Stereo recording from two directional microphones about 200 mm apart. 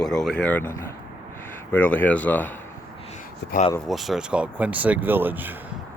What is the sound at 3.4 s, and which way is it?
Speech, 60° left (ahead or behind).